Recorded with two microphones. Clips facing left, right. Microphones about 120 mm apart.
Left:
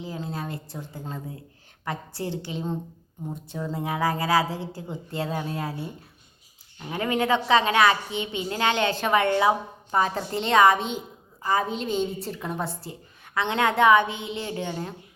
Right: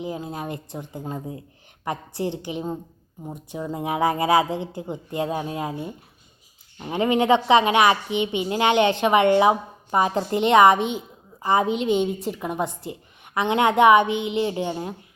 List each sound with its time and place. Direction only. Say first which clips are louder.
0.0 s a woman's voice: right 3 dB; 15° right (ahead or behind)